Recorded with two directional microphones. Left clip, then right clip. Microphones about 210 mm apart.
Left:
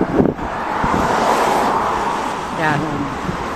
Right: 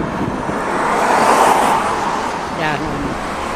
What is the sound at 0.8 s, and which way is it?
Vehicle, 45° right (ahead or behind).